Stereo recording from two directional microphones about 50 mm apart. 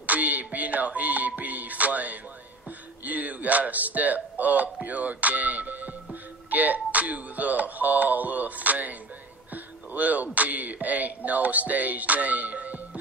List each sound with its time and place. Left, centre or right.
0.0 s music: right
3.1 s speech: right